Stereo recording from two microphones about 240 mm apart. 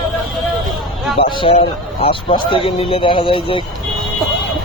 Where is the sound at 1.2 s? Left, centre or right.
Left.